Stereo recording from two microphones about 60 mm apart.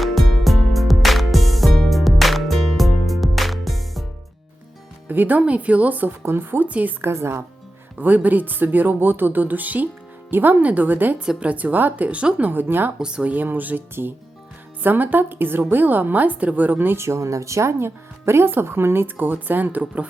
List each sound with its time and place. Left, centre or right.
0.0 s music: centre
5.0 s speech: right
6.2 s speech: right
6.7 s speech: right
7.0 s speech: right
7.9 s speech: right
13.0 s speech: centre
13.3 s speech: right
17.0 s speech: right